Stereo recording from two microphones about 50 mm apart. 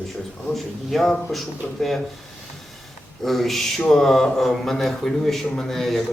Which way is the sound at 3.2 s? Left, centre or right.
Centre.